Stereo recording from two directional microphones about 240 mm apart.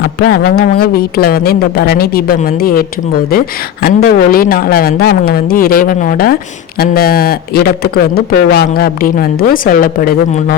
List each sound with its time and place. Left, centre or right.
0.3 s speech: left
3.8 s speech: left